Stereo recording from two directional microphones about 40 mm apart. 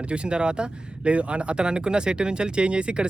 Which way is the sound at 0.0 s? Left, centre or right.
Right.